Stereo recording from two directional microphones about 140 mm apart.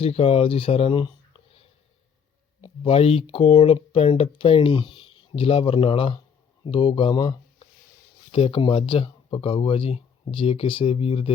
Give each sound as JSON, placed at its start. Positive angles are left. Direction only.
{"t": 0.0, "sound": "speech", "side_deg": 45}
{"t": 2.6, "sound": "speech", "side_deg": 40}